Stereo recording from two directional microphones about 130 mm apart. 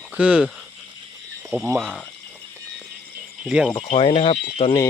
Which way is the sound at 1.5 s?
15° right (ahead or behind).